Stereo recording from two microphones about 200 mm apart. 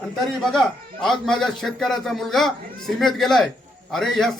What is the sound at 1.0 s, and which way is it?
Speech, centre (ahead or behind).